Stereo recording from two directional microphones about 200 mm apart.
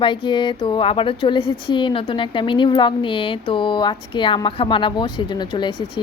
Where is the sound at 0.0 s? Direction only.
25° left (ahead or behind).